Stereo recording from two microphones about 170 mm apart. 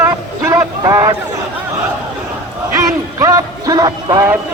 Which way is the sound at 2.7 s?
20° right (ahead or behind).